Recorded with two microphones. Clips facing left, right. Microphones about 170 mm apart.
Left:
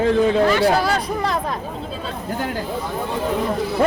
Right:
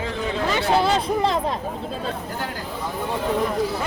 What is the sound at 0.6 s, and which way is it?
Speech, 25° right (ahead or behind).